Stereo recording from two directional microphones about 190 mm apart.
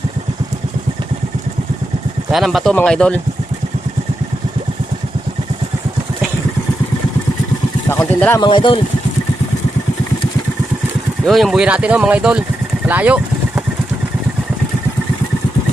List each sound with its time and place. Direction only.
2.3 s speech: centre (ahead or behind)
7.9 s speech: 10° left (ahead or behind)
8.4 s speech: 25° left (ahead or behind)
11.3 s speech: centre (ahead or behind)
12.9 s vehicle: 5° right (ahead or behind)